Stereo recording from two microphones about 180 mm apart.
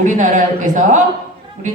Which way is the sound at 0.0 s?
45° right (ahead or behind).